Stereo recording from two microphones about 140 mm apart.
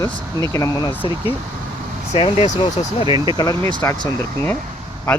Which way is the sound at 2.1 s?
45° left (ahead or behind).